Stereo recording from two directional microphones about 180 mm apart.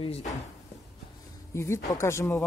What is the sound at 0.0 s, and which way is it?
Speech, 35° left (ahead or behind).